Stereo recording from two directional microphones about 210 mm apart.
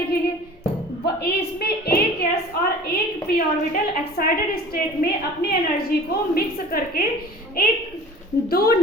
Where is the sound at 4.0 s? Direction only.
45° left (ahead or behind).